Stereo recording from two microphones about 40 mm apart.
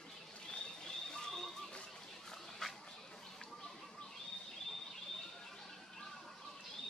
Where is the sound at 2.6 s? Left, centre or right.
Centre.